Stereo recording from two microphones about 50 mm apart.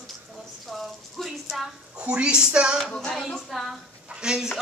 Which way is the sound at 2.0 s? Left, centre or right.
Centre.